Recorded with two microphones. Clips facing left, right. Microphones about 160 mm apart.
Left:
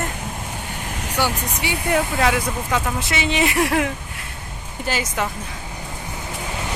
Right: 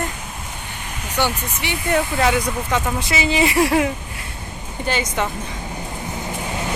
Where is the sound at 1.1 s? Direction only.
10° left (ahead or behind).